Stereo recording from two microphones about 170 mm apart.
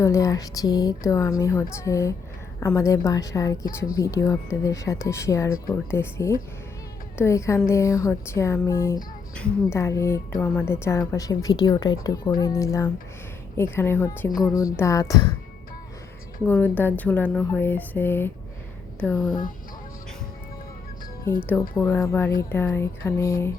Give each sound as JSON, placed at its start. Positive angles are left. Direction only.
{"t": 0.0, "sound": "a woman's voice", "side_deg": 20}
{"t": 16.5, "sound": "speech", "side_deg": 10}
{"t": 21.3, "sound": "speech", "side_deg": 15}